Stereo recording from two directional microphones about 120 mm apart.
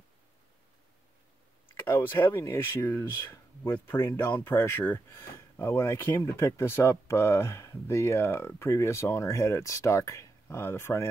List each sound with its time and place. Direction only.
2.0 s speech: 20° left (ahead or behind)